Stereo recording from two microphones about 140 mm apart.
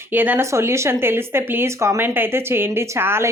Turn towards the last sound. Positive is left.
turn(degrees=-15)  # may be behind; listen again after turning